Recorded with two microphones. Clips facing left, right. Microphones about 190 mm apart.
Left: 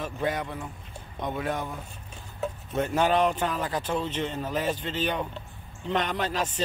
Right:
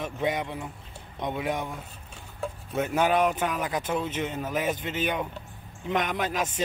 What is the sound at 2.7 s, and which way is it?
Speech, 5° right (ahead or behind).